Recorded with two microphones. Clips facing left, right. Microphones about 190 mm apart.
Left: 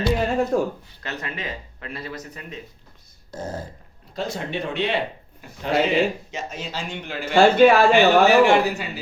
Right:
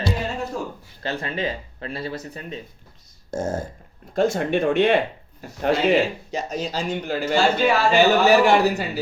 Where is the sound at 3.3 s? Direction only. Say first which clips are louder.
Right 6 dB; 45° right (ahead or behind).